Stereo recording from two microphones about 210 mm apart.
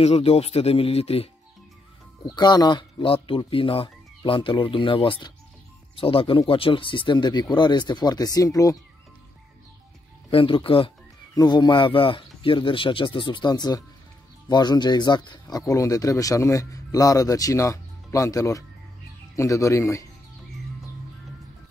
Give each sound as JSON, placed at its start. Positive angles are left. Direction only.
{"t": 0.0, "sound": "speech", "side_deg": 30}
{"t": 10.3, "sound": "speech", "side_deg": 25}